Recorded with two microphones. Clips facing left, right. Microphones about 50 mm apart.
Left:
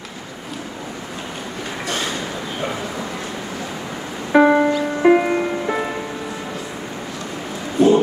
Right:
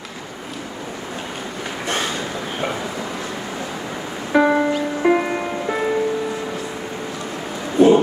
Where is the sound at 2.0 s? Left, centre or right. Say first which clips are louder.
Even; centre.